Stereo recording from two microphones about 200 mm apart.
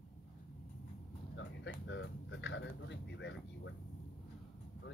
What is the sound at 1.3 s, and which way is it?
Speech, 65° left (ahead or behind).